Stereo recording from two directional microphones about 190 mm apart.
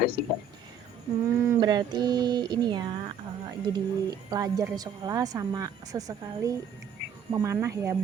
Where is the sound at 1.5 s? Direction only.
20° right (ahead or behind).